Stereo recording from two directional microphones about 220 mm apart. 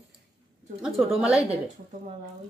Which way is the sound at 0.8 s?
5° right (ahead or behind).